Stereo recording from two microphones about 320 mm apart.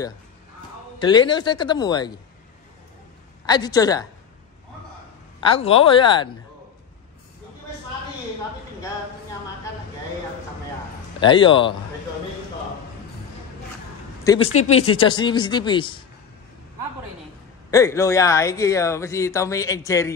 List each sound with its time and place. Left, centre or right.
0.9 s speech: centre
3.4 s speech: centre
5.4 s speech: centre
11.1 s speech: centre
14.4 s speech: left
15.0 s speech: centre
17.6 s speech: centre